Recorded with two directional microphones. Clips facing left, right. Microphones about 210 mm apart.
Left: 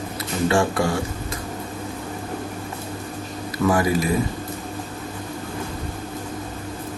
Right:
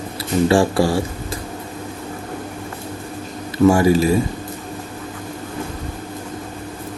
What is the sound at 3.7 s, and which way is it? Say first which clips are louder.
Speech: right 6 dB; 25° right (ahead or behind).